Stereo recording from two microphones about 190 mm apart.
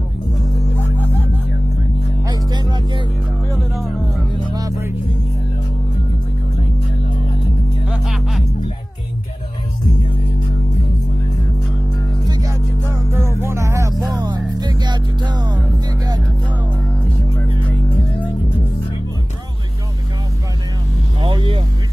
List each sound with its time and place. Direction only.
0.6 s music: 10° left (ahead or behind)
2.5 s music: 20° right (ahead or behind)
4.5 s music: 20° right (ahead or behind)
7.9 s music: centre (ahead or behind)
13.4 s music: 15° right (ahead or behind)
21.2 s vehicle: 25° right (ahead or behind)